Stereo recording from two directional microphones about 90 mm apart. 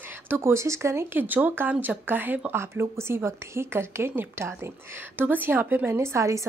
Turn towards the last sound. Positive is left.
turn(degrees=-35)  # may be behind; listen again after turning